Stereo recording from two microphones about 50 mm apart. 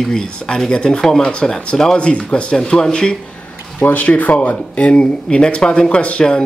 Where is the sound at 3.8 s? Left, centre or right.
Left.